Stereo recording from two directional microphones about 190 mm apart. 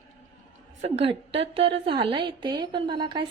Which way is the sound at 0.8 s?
35° right (ahead or behind).